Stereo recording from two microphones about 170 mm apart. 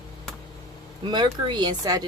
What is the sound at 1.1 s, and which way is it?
Speech, 25° right (ahead or behind).